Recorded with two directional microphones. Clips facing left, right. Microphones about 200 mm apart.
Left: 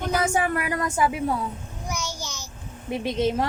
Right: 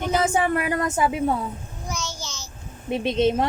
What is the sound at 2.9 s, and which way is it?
Speech, 25° right (ahead or behind).